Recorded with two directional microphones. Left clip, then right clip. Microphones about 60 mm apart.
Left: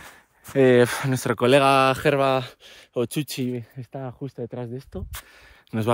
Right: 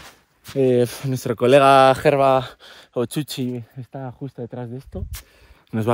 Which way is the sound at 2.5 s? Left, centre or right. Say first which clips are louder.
Right 4 dB; right.